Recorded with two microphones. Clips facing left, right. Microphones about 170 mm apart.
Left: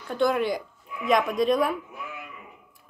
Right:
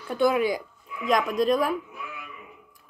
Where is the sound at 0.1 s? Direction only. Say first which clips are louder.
Right 1 dB; 5° right (ahead or behind).